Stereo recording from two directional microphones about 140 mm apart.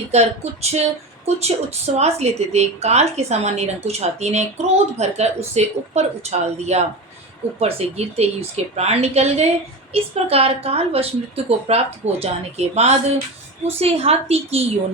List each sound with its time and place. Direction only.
0.1 s a woman's voice: 50° right (ahead or behind)